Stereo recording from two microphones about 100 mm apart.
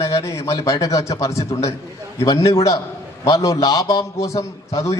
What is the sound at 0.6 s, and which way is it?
A man's voice, 35° left (ahead or behind).